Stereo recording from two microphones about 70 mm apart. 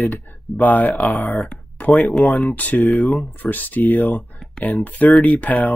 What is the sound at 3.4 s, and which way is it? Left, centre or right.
Speech, left.